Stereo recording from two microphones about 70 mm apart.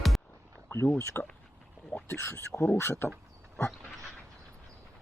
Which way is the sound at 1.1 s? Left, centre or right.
Left.